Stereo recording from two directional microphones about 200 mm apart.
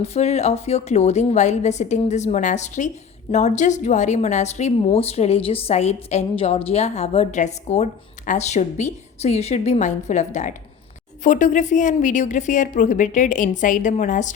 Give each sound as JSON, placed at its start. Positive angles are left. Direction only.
{"t": 0.0, "sound": "a woman's voice", "side_deg": 30}